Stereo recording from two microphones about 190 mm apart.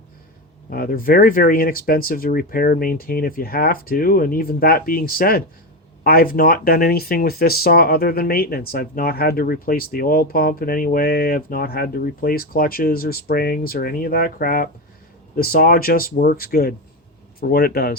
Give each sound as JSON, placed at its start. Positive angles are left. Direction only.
{"t": 0.7, "sound": "speech", "side_deg": 50}